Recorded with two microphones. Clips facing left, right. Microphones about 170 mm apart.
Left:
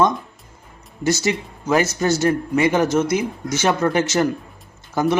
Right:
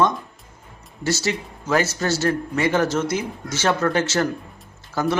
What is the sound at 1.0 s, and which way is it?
A man's voice, 15° left (ahead or behind).